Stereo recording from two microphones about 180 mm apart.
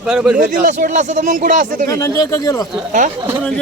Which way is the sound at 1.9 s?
15° left (ahead or behind).